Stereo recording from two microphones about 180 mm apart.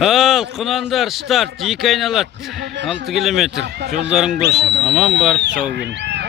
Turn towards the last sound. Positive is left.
turn(degrees=-75)  # may be behind; listen again after turning